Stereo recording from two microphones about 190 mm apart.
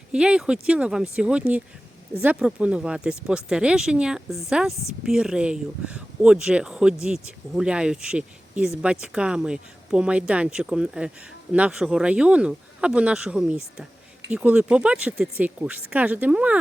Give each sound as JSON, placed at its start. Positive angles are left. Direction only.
{"t": 0.1, "sound": "speech", "side_deg": -5}